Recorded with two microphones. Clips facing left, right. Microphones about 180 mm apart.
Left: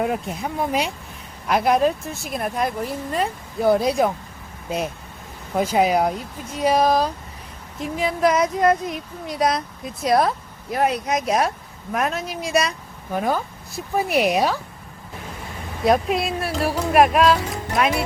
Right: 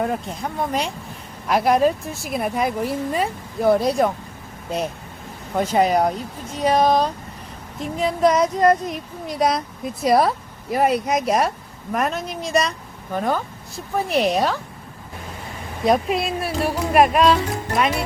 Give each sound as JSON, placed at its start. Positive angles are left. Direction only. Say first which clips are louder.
{"t": 0.0, "sound": "speech", "louder": "even", "side_deg": 5}
{"t": 5.5, "sound": "speech", "louder": "even", "side_deg": 5}
{"t": 15.8, "sound": "speech", "louder": "even", "side_deg": 0}